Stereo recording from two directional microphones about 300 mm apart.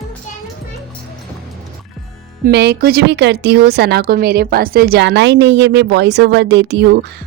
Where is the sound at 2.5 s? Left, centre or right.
Right.